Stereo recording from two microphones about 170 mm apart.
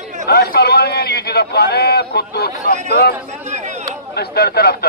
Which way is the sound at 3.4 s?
45° right (ahead or behind).